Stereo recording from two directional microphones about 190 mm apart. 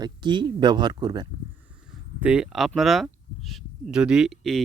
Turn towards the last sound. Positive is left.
turn(degrees=0)  # may be behind; listen again after turning